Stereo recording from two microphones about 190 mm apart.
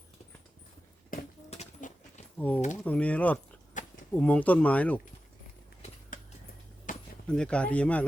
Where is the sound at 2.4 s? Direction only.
10° left (ahead or behind).